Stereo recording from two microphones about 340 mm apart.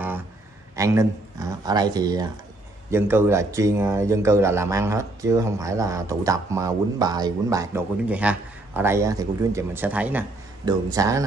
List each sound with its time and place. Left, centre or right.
0.7 s speech: centre